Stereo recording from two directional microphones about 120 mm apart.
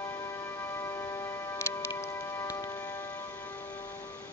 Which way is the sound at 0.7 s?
20° left (ahead or behind).